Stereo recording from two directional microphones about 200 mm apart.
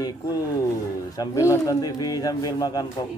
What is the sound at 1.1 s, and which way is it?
Speech, 20° left (ahead or behind).